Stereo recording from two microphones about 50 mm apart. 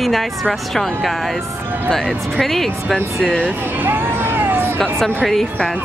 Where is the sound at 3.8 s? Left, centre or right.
Right.